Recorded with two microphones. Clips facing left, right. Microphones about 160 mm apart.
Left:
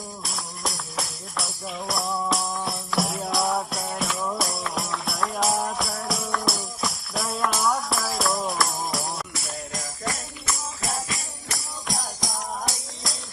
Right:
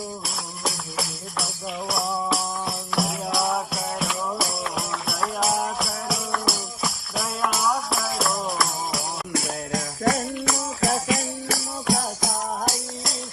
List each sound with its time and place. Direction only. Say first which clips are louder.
0.3 s music: right 2 dB; centre (ahead or behind)
9.3 s music: right 8 dB; 90° right
12.6 s music: right 5 dB; centre (ahead or behind)